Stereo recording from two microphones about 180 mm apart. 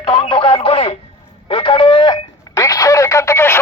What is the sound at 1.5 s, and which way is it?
Telephone, 30° left (ahead or behind).